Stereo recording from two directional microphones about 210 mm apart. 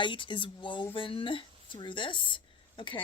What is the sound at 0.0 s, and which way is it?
Speech, 25° left (ahead or behind).